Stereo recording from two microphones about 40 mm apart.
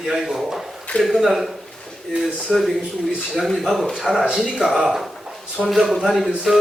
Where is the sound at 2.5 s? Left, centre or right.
Centre.